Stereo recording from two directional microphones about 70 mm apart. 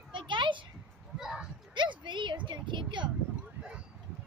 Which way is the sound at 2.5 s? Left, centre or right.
Right.